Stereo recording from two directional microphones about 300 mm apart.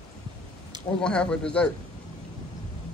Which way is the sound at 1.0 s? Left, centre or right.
Centre.